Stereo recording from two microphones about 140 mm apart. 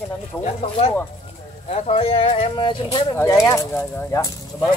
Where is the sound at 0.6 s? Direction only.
45° left (ahead or behind).